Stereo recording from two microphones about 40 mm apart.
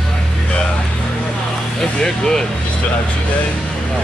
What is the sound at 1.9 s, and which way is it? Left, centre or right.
Speech, centre.